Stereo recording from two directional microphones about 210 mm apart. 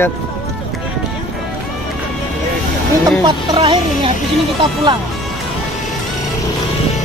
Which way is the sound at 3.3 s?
25° right (ahead or behind).